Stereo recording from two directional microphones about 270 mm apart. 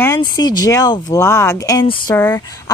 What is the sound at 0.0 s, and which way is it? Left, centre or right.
Speech, centre.